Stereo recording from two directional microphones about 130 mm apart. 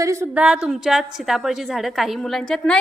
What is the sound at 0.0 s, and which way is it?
Speech, 25° right (ahead or behind).